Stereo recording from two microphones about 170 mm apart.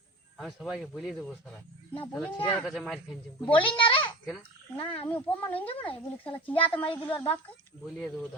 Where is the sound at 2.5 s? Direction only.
Centre (ahead or behind).